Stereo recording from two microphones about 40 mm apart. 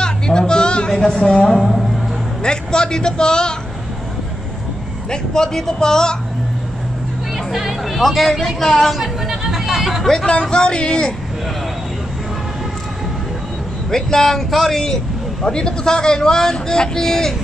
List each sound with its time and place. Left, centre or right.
0.0 s a sound: centre
1.0 s speech: centre
1.6 s music: centre
2.4 s a man's voice: centre
5.1 s speech: centre
7.3 s speech: centre
8.9 s chatter: centre
10.4 s a man's voice: left
13.8 s speech: centre